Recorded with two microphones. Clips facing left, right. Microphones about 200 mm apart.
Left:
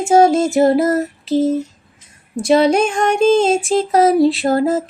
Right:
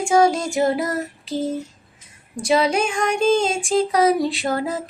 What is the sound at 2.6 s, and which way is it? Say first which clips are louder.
Music: left 6 dB; 35° left (ahead or behind).